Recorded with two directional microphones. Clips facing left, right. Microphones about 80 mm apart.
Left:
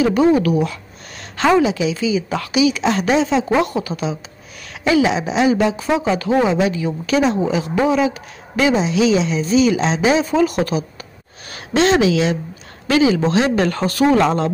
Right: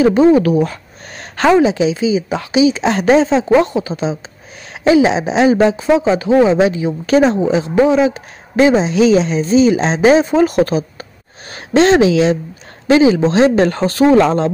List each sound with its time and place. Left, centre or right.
0.0 s speech: right
7.4 s speech: right